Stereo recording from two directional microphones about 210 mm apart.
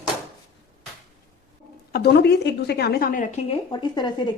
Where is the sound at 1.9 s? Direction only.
50° left (ahead or behind); by 3.6 s 35° left (ahead or behind).